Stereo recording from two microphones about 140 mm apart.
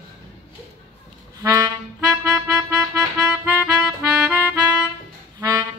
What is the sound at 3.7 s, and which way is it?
Music, 5° right (ahead or behind).